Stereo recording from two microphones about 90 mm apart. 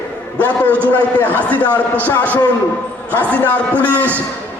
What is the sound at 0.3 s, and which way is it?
A man's voice, 15° left (ahead or behind).